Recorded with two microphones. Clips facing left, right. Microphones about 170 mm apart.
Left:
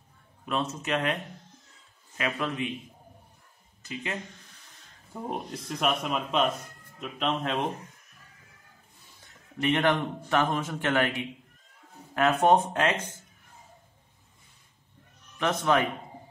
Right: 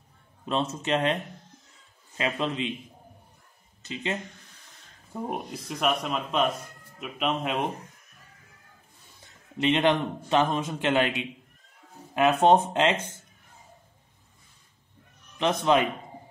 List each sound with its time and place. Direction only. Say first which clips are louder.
0.5 s a man's voice: right 3 dB; 30° right (ahead or behind)
2.1 s a man's voice: right 2 dB; 25° right (ahead or behind)
3.8 s a man's voice: right 3 dB; 25° right (ahead or behind)
5.3 s a man's voice: right 1 dB; 5° right (ahead or behind)
9.6 s a man's voice: right 2 dB; 20° right (ahead or behind)
15.3 s a man's voice: right 2 dB; 20° right (ahead or behind)